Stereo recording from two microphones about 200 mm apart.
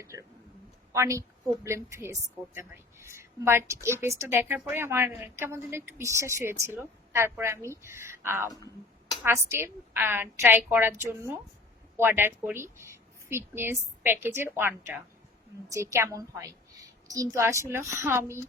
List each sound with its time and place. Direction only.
0.0 s a woman's voice: 15° right (ahead or behind)
11.9 s a woman's voice: 10° right (ahead or behind)